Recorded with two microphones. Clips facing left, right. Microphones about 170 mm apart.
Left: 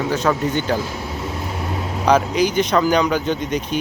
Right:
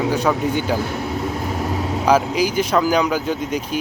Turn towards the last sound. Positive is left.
turn(degrees=-5)  # may be behind; listen again after turning